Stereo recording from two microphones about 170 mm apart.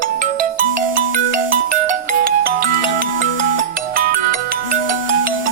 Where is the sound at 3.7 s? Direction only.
60° right (ahead or behind).